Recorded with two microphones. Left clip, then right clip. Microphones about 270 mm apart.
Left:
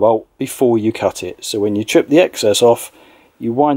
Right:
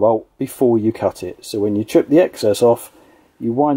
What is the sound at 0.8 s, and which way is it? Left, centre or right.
Speech, centre.